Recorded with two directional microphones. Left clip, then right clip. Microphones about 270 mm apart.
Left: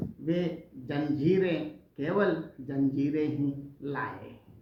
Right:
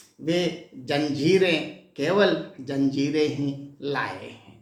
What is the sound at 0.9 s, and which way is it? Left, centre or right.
A man's voice, centre.